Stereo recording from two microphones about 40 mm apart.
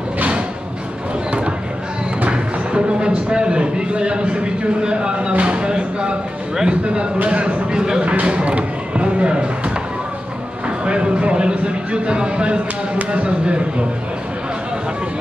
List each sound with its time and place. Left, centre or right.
2.2 s speech: right
8.0 s a sound: right
10.9 s speech: right